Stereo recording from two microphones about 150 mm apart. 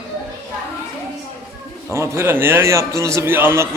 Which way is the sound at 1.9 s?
20° right (ahead or behind).